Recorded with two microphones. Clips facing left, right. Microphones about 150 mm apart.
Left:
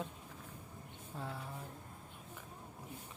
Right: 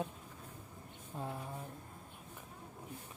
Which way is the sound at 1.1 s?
20° right (ahead or behind).